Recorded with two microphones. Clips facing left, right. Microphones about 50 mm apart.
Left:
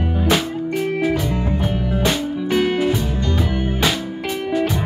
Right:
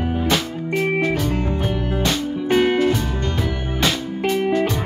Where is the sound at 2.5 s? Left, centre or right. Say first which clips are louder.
Right 2 dB; centre.